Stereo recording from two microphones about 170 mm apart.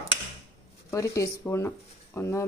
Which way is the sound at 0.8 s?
20° left (ahead or behind).